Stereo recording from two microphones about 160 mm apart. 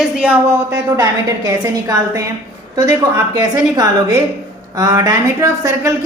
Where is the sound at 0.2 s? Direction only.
10° right (ahead or behind).